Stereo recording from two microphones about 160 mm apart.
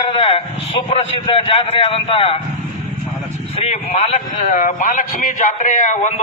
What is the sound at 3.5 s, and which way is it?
A man's voice, 40° left (ahead or behind).